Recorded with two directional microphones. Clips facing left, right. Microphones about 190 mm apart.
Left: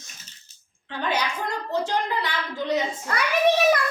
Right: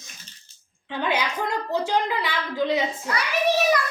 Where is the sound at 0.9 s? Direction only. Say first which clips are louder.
Right 1 dB; 15° right (ahead or behind).